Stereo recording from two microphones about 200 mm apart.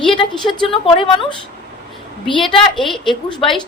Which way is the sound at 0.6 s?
25° left (ahead or behind).